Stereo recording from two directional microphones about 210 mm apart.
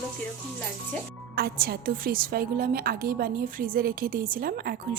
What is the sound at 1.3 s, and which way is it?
A woman's voice, 45° right (ahead or behind).